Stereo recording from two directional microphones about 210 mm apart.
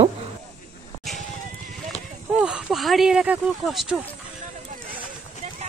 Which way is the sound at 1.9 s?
30° left (ahead or behind).